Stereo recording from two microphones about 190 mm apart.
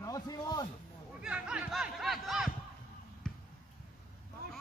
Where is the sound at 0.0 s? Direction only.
20° left (ahead or behind).